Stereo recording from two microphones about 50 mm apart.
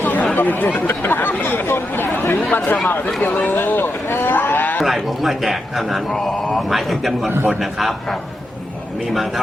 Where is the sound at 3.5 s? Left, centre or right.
Left.